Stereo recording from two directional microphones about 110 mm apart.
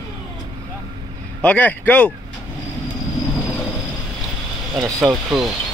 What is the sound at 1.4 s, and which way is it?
Speech, 15° left (ahead or behind).